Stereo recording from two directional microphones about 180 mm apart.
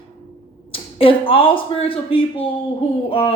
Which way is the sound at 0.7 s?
30° left (ahead or behind).